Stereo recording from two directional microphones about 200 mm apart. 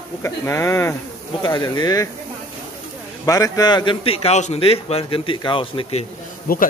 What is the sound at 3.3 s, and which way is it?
A man's voice, 20° left (ahead or behind).